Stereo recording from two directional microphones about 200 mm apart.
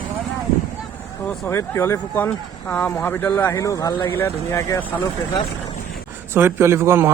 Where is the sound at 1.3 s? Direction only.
10° left (ahead or behind).